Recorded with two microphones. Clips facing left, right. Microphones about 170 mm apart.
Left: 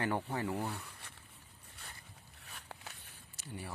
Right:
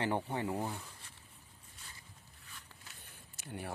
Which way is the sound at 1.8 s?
60° left (ahead or behind).